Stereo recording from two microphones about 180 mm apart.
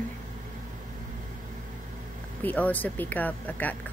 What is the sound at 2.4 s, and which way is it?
Speech, 10° left (ahead or behind).